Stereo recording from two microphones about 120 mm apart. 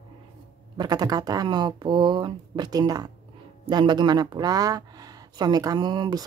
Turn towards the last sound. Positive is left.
turn(degrees=-35)  # may be behind; listen again after turning